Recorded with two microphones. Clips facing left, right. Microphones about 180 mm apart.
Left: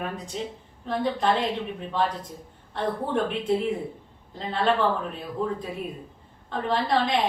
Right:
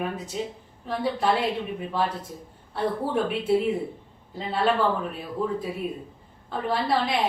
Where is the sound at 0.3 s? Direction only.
5° right (ahead or behind).